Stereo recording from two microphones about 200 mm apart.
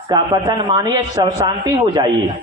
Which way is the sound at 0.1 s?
20° right (ahead or behind).